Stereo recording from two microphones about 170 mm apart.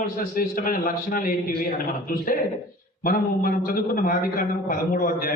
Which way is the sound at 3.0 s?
55° left (ahead or behind).